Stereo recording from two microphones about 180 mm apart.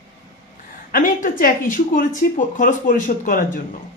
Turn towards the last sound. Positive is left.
turn(degrees=50)  # may be behind; listen again after turning